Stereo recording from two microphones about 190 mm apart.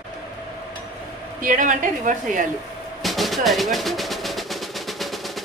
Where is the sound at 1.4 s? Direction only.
45° right (ahead or behind).